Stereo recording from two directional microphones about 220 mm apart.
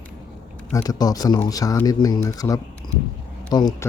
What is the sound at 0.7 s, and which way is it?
Speech, 15° left (ahead or behind).